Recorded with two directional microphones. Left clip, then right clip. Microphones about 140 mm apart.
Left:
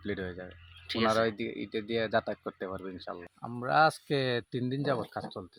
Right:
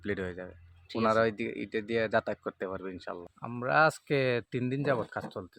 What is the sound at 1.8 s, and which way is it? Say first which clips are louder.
Speech: right 1 dB; 10° right (ahead or behind).